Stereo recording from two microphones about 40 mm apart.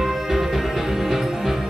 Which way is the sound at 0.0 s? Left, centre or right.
Centre.